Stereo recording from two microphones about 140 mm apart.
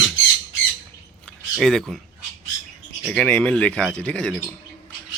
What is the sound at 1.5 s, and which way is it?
Speech, centre (ahead or behind).